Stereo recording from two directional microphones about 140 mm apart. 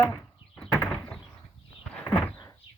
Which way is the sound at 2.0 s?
10° left (ahead or behind).